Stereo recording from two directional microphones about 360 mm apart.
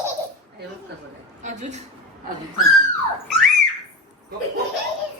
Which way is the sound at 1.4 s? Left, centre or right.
Centre.